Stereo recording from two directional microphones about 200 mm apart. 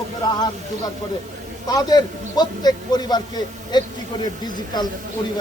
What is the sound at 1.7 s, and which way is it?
A man's voice, 20° left (ahead or behind).